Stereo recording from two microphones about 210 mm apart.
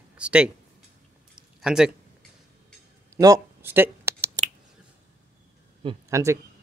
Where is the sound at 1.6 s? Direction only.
5° right (ahead or behind).